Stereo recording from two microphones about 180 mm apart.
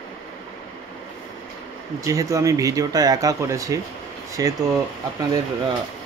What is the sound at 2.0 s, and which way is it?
Speech, 20° right (ahead or behind).